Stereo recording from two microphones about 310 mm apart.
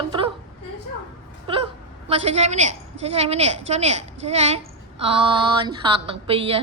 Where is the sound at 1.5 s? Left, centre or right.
Centre.